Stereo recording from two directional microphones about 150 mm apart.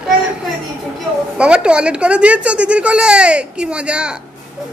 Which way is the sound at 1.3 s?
5° right (ahead or behind).